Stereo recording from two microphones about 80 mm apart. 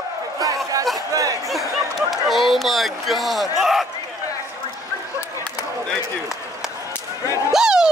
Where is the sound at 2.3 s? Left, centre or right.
Centre.